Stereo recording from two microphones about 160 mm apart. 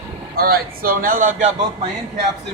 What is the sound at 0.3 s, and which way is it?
Speech, 65° right (ahead or behind).